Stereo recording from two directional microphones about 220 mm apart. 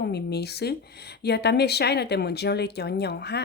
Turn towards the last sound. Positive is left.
turn(degrees=50)  # may be behind; listen again after turning